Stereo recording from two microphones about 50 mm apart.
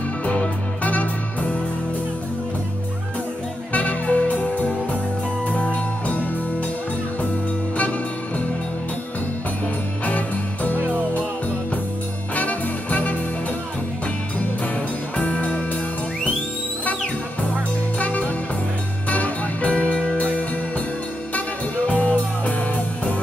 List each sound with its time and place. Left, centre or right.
0.2 s music: left
3.7 s music: left
10.0 s music: left
12.4 s music: left
15.1 s music: left
17.9 s music: left
21.8 s music: left